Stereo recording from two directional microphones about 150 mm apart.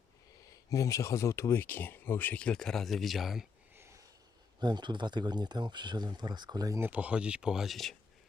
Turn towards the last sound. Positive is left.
turn(degrees=0)  # may be behind; listen again after turning